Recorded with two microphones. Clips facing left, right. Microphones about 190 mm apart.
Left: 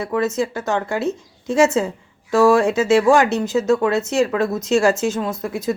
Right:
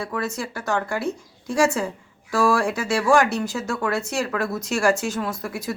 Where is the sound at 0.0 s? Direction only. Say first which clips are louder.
Left 7 dB; 20° left (ahead or behind).